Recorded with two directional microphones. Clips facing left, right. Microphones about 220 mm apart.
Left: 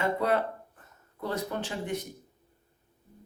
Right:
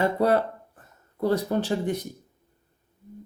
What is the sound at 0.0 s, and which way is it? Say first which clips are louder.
Speech: right 5 dB; 35° right (ahead or behind).